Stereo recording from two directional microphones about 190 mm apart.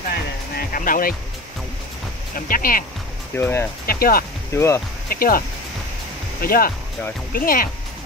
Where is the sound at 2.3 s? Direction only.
50° left (ahead or behind).